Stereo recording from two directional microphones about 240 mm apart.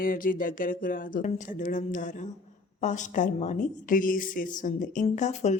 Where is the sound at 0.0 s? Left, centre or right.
Left.